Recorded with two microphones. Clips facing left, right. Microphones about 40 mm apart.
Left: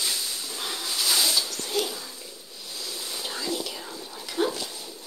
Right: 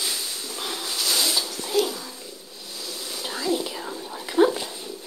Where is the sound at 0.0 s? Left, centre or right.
Centre.